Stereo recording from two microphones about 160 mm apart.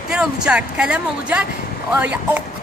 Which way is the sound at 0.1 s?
5° right (ahead or behind).